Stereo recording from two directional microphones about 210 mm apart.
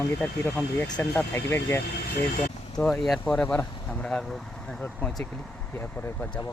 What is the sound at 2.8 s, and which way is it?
Speech, centre (ahead or behind).